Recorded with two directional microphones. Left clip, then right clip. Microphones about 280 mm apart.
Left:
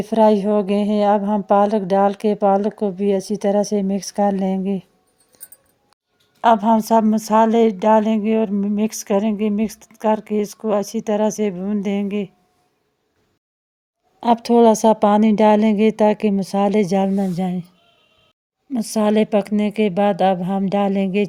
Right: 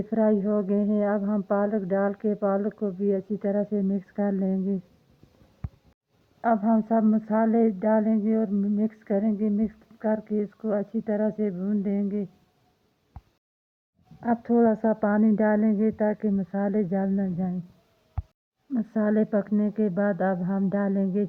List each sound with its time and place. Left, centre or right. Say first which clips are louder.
0.0 s speech: left 10 dB; left
6.4 s speech: left 10 dB; left
14.2 s speech: left 9 dB; left
18.7 s speech: left 8 dB; left